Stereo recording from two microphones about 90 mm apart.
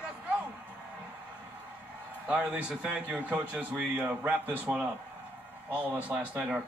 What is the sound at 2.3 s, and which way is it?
Speech, 10° right (ahead or behind).